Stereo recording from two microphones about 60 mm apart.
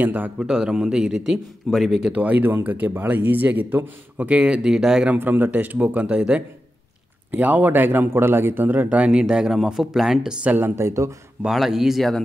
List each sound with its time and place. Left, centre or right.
0.0 s a man's voice: right
0.4 s a man's voice: centre
1.9 s speech: centre
5.1 s speech: right
7.2 s a man's voice: right
9.3 s a man's voice: centre
10.4 s a man's voice: right
10.8 s speech: right
11.4 s speech: centre